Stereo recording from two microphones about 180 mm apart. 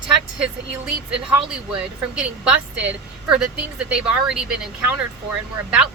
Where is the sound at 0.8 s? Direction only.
5° right (ahead or behind).